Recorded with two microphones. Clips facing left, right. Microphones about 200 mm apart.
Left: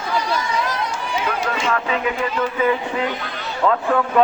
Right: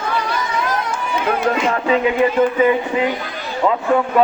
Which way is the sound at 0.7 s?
50° right (ahead or behind).